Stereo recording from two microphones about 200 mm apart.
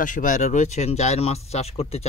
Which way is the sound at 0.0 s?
40° left (ahead or behind).